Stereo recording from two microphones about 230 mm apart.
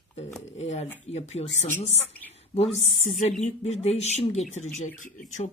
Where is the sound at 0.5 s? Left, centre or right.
Left.